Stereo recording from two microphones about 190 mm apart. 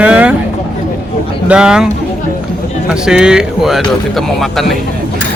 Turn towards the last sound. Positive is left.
turn(degrees=0)  # may be behind; listen again after turning